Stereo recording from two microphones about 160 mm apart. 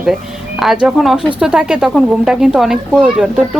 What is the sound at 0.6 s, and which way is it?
A woman's voice, 5° right (ahead or behind).